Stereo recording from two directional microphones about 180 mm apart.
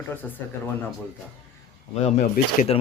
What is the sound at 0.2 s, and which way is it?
Speech, 10° left (ahead or behind).